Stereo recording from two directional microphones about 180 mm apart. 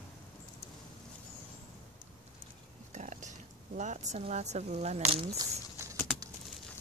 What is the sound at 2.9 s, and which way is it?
Speech, 40° right (ahead or behind).